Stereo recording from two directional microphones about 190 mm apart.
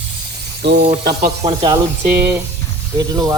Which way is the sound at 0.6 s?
65° right (ahead or behind).